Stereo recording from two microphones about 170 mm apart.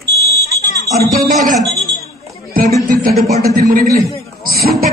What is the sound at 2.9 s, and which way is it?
Speech, 55° right (ahead or behind).